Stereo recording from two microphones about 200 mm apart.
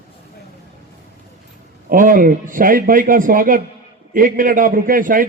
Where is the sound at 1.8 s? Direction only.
45° right (ahead or behind).